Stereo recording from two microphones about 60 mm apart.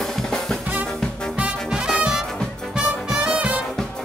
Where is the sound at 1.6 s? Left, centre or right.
Centre.